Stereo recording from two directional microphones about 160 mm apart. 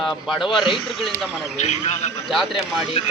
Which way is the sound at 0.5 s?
Centre (ahead or behind).